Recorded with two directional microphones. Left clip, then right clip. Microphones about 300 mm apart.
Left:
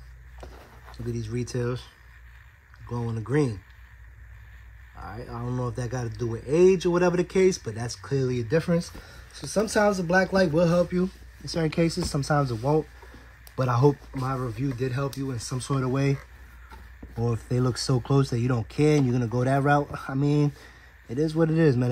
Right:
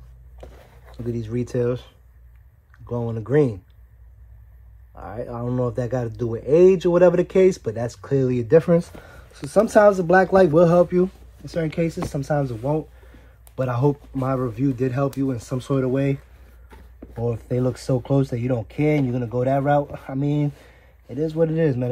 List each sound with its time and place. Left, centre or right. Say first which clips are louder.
0.9 s speech: right 6 dB; centre
2.9 s speech: right 7 dB; centre
5.0 s speech: right 7 dB; centre
11.4 s speech: right 2 dB; centre
14.2 s speech: right 7 dB; centre